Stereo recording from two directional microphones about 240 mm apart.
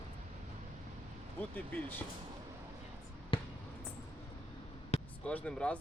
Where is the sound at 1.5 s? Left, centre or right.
Centre.